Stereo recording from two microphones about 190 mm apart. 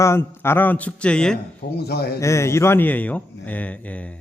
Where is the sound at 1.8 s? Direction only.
55° left (ahead or behind).